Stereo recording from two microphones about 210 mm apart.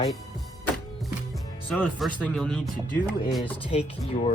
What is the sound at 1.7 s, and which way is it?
Speech, 5° left (ahead or behind).